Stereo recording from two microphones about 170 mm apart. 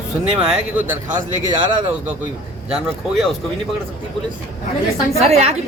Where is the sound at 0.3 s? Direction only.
5° right (ahead or behind).